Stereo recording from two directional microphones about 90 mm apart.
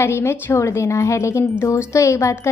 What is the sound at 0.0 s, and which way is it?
A woman's voice, 30° left (ahead or behind).